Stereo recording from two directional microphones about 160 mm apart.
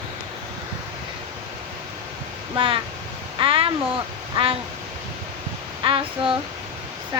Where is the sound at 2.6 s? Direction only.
35° right (ahead or behind).